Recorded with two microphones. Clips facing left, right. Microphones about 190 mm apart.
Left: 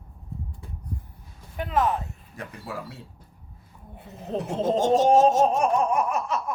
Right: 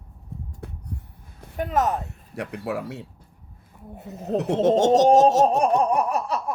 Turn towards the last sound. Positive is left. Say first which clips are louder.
# right 2 dB
turn(degrees=-35)  # may be behind; listen again after turning